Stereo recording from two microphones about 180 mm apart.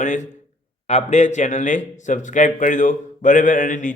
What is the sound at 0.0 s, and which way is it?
A man's voice, 45° left (ahead or behind).